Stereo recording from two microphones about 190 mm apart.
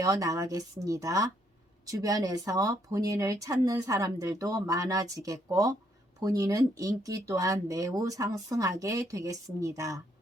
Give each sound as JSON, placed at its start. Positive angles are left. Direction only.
{"t": 0.0, "sound": "speech", "side_deg": -20}